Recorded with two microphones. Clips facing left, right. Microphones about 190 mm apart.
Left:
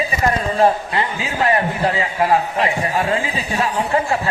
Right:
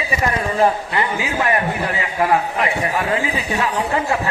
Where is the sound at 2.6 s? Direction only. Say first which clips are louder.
Left 1 dB; 30° left (ahead or behind).